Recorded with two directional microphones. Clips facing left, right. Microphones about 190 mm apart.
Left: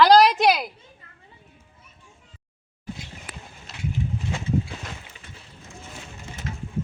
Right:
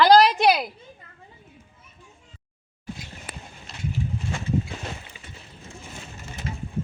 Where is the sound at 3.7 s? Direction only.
5° left (ahead or behind).